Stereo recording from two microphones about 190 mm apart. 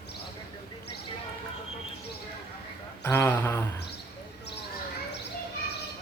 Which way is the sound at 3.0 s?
10° left (ahead or behind).